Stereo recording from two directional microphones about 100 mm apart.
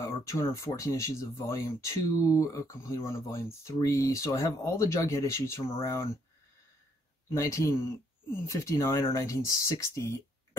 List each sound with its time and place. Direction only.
0.0 s speech: 30° left (ahead or behind)
7.3 s speech: 30° left (ahead or behind)